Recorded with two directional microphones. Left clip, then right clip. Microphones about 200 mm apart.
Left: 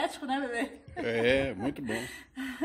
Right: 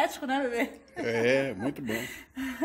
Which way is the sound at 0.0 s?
30° right (ahead or behind).